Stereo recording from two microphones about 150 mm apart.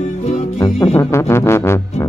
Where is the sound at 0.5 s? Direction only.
20° left (ahead or behind).